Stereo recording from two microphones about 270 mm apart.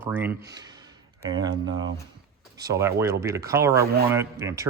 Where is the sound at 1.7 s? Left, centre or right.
Right.